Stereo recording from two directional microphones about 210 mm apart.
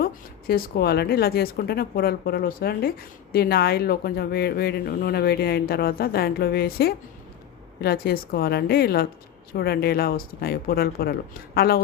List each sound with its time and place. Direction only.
0.0 s speech: 45° left (ahead or behind)